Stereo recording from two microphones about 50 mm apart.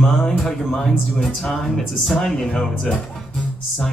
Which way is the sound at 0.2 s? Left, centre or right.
Centre.